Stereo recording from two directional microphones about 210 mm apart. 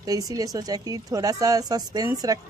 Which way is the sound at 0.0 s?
15° right (ahead or behind).